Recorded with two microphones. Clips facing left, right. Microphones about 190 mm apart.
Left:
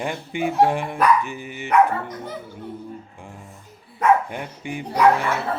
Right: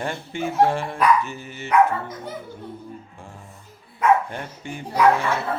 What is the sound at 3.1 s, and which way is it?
Music, 15° left (ahead or behind).